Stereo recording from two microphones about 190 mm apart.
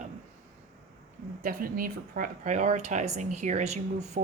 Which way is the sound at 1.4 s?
50° right (ahead or behind).